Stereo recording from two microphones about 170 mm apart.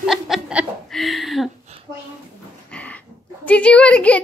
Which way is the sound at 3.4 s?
10° left (ahead or behind).